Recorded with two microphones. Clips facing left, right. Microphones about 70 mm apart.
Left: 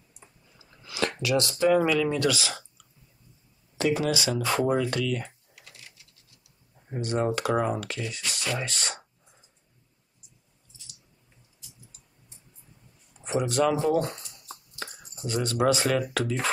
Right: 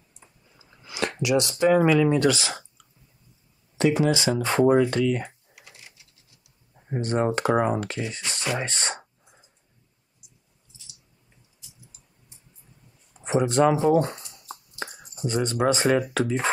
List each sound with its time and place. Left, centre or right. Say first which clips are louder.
0.6 s speech: even; right
3.8 s speech: right 4 dB; right
6.9 s speech: right 3 dB; right
13.2 s speech: right 4 dB; right
14.8 s speech: right 6 dB; centre